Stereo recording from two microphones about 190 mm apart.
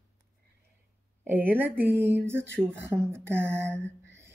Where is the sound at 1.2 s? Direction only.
10° right (ahead or behind).